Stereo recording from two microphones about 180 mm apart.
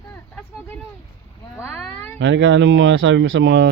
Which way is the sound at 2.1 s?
80° right.